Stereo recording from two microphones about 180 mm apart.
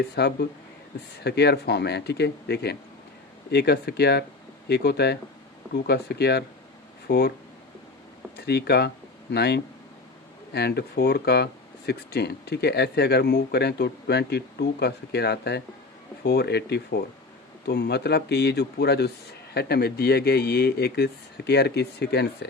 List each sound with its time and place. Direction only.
0.2 s speech: 65° left (ahead or behind)
8.4 s speech: 65° left (ahead or behind)